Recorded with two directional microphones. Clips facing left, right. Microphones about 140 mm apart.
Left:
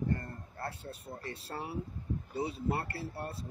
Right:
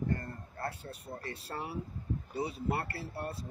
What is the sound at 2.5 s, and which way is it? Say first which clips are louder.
Speech: even; 25° left (ahead or behind).